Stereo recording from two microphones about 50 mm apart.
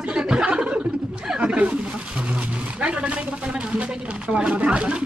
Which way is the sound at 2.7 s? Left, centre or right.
Right.